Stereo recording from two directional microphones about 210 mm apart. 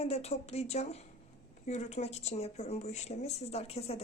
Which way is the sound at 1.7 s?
30° left (ahead or behind).